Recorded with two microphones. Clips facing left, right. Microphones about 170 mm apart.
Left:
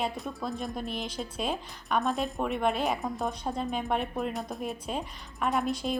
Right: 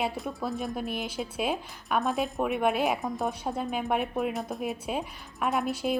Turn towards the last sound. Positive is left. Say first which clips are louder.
# right 1 dB
turn(degrees=-5)  # may be behind; listen again after turning